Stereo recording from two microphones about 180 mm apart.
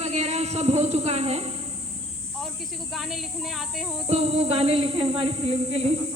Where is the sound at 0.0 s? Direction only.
35° right (ahead or behind).